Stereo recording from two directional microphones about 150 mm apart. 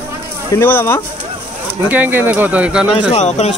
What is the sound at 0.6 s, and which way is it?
Speech, 15° left (ahead or behind).